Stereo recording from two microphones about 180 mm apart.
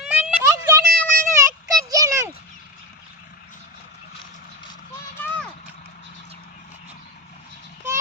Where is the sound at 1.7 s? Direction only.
20° right (ahead or behind).